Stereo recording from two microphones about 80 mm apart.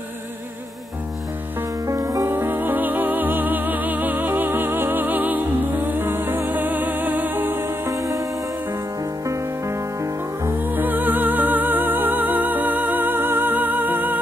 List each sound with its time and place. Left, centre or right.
1.9 s music: right
2.3 s music: right
7.8 s music: right
10.5 s music: right